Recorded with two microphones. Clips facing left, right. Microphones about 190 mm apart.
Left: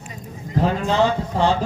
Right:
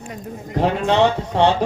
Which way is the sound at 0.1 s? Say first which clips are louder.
Even; 70° right (ahead or behind).